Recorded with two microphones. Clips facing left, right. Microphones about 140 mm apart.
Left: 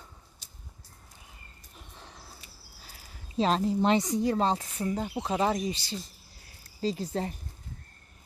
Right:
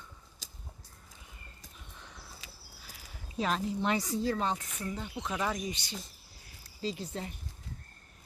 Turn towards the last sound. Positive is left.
turn(degrees=40)  # may be behind; listen again after turning